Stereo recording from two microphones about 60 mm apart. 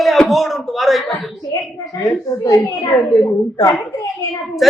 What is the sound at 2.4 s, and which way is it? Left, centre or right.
Speech, left.